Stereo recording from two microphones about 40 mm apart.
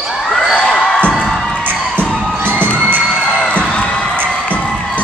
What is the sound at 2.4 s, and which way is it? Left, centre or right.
Children shouting, right.